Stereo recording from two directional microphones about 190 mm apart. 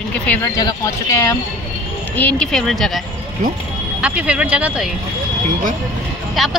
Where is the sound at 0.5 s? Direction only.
20° left (ahead or behind); by 2.9 s centre (ahead or behind).